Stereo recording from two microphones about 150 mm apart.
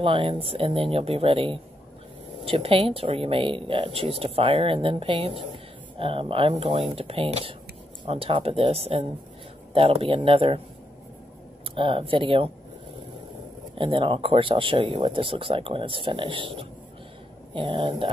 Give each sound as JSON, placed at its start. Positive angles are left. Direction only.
{"t": 0.0, "sound": "speech", "side_deg": -35}
{"t": 11.7, "sound": "speech", "side_deg": -35}
{"t": 13.7, "sound": "speech", "side_deg": -35}